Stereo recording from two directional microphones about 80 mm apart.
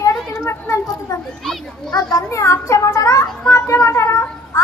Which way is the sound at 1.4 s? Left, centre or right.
Centre.